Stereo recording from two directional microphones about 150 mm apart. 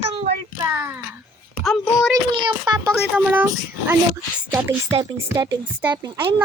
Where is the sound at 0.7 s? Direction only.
15° right (ahead or behind).